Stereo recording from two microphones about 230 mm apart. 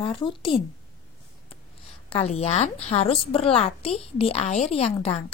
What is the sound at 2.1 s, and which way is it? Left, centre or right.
A woman's voice, left.